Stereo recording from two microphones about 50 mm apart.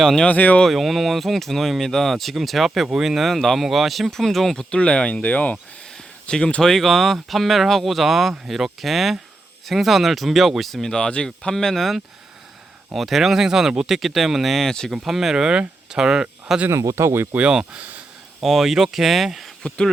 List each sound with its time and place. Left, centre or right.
0.3 s speech: left
0.7 s speech: centre
4.7 s speech: centre
6.2 s speech: centre
15.0 s speech: centre
16.6 s speech: right
17.5 s a sound: centre
18.4 s speech: centre
19.6 s speech: centre